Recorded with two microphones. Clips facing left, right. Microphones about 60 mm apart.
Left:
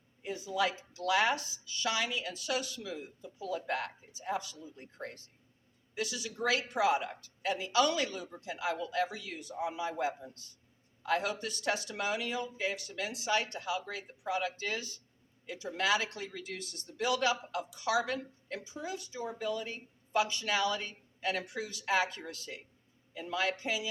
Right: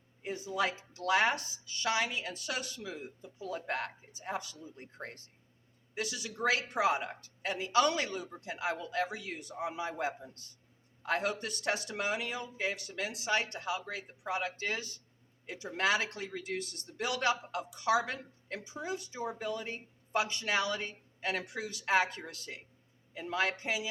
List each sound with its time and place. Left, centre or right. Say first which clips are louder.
0.2 s a woman's voice: left 1 dB; right
18.0 s a woman's voice: left 3 dB; right
18.6 s a woman's voice: right 4 dB; right